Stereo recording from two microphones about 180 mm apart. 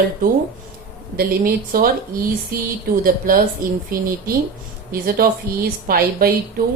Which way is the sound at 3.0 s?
50° right (ahead or behind).